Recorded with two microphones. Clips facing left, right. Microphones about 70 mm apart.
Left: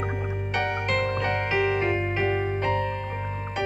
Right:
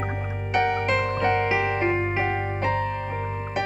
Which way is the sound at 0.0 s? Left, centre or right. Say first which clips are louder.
Left 1 dB; centre.